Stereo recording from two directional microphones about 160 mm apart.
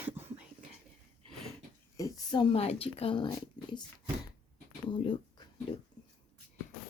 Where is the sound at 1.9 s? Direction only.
25° left (ahead or behind).